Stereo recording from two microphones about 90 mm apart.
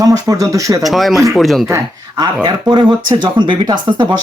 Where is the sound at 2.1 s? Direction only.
50° right (ahead or behind).